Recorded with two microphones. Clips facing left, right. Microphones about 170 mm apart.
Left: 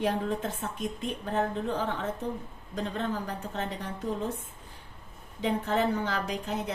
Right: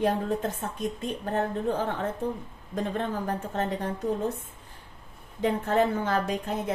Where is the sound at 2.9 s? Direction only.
50° right (ahead or behind).